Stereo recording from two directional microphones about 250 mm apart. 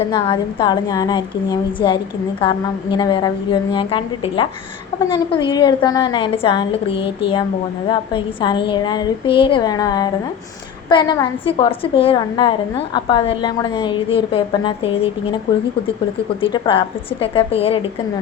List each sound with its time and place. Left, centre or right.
0.1 s a woman's voice: centre
16.4 s a woman's voice: left